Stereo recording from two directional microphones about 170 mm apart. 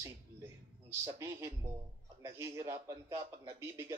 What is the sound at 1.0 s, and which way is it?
A man's voice, 15° right (ahead or behind).